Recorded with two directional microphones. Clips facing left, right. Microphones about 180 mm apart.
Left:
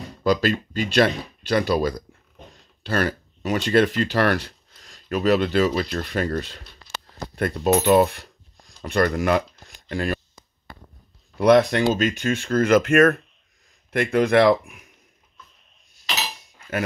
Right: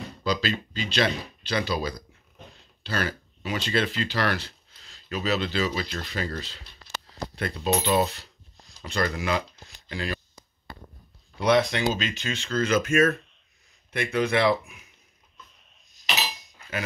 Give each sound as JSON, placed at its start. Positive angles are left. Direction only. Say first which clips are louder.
{"t": 0.2, "sound": "speech", "louder": "left 7 dB", "side_deg": 50}
{"t": 11.3, "sound": "speech", "louder": "left 6 dB", "side_deg": 50}